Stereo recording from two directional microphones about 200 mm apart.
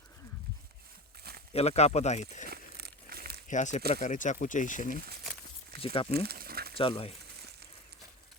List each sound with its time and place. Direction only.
1.5 s speech: 30° left (ahead or behind)
2.5 s crumpling: 50° right (ahead or behind)
3.5 s speech: 35° left (ahead or behind)
5.8 s speech: 30° left (ahead or behind)
6.1 s a sound: 50° right (ahead or behind)
6.7 s speech: 25° left (ahead or behind)